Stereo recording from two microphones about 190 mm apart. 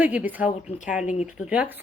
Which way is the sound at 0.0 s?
10° right (ahead or behind).